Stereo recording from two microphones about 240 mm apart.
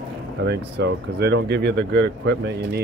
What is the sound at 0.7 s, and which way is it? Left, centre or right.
Speech, right.